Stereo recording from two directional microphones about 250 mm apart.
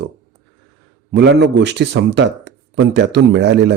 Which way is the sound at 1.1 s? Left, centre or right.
Right.